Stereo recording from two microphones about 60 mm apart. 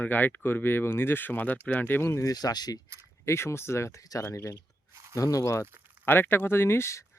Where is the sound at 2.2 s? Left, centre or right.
Left.